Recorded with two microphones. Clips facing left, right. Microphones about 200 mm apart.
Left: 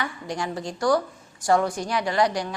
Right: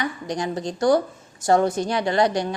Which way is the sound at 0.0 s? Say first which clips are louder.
Right 3 dB; 20° right (ahead or behind).